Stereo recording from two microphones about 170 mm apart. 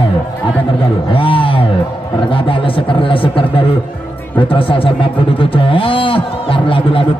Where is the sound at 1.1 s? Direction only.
30° left (ahead or behind).